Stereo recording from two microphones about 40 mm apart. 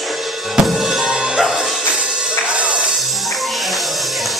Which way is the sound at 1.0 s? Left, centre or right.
Centre.